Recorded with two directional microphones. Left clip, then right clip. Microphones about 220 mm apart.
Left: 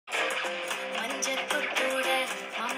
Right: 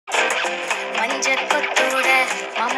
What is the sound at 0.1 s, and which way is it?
Music, 45° right (ahead or behind).